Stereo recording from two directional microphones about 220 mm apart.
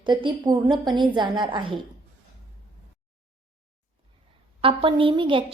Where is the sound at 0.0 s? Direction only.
20° right (ahead or behind).